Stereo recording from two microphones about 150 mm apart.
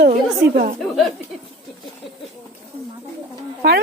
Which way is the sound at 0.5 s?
60° right (ahead or behind).